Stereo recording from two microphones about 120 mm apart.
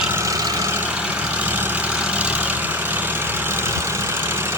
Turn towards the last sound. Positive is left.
turn(degrees=-20)  # may be behind; listen again after turning